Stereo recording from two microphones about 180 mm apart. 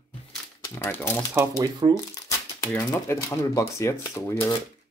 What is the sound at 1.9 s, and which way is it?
Speech, 20° left (ahead or behind).